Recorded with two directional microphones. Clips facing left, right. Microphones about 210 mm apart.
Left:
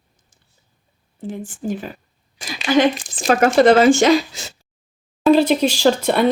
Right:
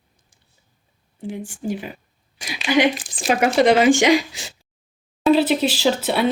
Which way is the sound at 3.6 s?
15° right (ahead or behind).